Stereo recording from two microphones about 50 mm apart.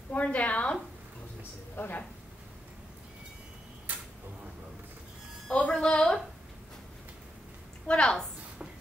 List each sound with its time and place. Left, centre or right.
0.1 s a woman's voice: left
1.8 s speech: left
5.5 s a sound: left
7.8 s a woman's voice: left